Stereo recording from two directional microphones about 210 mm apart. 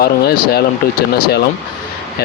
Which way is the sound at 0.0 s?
50° left (ahead or behind).